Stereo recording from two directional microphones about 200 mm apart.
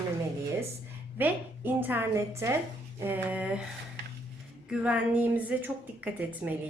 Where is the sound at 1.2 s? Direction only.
10° right (ahead or behind).